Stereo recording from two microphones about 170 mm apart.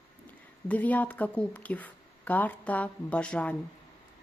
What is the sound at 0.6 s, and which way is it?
Speech, 10° left (ahead or behind).